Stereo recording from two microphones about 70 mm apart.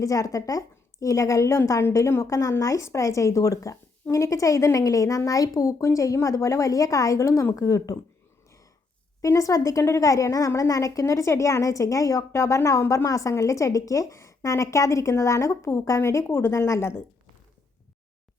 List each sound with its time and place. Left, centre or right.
0.0 s a woman's voice: left
9.2 s a woman's voice: left